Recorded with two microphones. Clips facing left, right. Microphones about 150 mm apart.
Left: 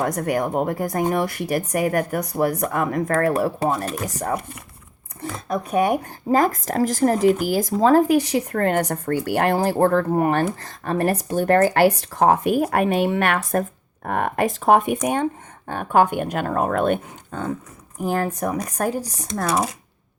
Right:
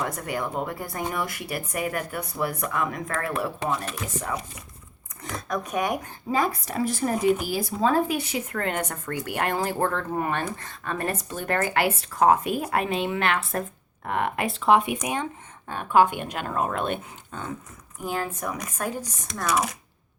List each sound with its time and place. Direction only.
0.0 s speech: 45° left (ahead or behind)
5.2 s speech: 30° left (ahead or behind); by 6.7 s 45° left (ahead or behind)
6.7 s speech: 90° left
6.9 s speech: 40° left (ahead or behind)